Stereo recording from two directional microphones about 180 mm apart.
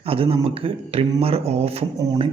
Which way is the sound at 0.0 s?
30° right (ahead or behind).